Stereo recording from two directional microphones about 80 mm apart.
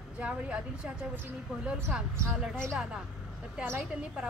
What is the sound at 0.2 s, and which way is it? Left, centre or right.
A woman's voice, centre.